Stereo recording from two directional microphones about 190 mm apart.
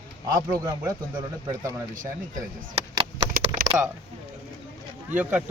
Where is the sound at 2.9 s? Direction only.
20° right (ahead or behind).